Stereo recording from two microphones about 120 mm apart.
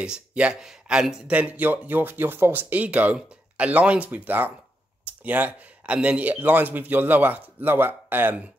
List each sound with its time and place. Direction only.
0.0 s speech: 10° right (ahead or behind)